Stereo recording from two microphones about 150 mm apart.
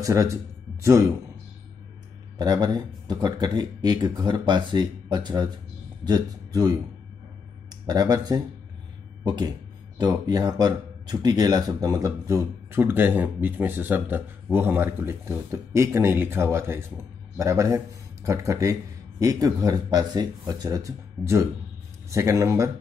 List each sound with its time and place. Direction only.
0.0 s speech: 20° right (ahead or behind)
2.3 s speech: 25° right (ahead or behind)